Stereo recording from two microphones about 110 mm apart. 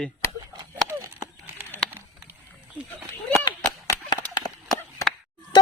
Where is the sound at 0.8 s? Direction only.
25° right (ahead or behind).